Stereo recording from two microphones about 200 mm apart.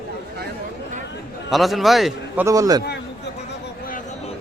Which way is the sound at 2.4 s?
15° right (ahead or behind).